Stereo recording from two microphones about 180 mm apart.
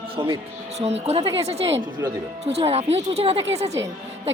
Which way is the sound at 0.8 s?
35° right (ahead or behind).